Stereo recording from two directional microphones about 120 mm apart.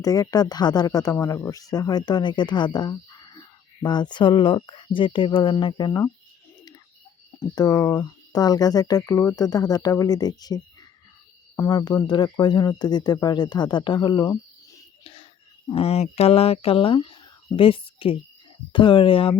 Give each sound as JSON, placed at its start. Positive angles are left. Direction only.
{"t": 0.0, "sound": "speech", "side_deg": 30}
{"t": 7.3, "sound": "speech", "side_deg": 35}
{"t": 15.0, "sound": "whispering", "side_deg": 45}
{"t": 15.7, "sound": "speech", "side_deg": 55}